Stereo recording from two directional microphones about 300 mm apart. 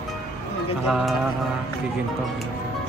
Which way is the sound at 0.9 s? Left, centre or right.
Centre.